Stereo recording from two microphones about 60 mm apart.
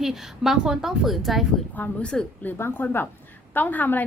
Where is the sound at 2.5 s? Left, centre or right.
Left.